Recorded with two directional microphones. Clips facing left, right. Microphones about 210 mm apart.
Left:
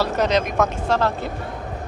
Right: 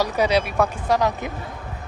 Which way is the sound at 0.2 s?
10° right (ahead or behind).